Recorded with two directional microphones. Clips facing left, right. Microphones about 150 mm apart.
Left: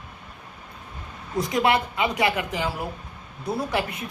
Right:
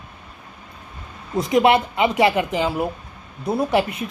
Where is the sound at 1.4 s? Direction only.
20° right (ahead or behind).